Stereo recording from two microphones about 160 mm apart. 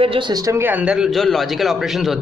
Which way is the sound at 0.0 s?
30° right (ahead or behind).